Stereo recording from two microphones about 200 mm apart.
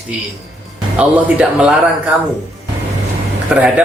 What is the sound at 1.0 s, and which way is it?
Speech, 5° right (ahead or behind).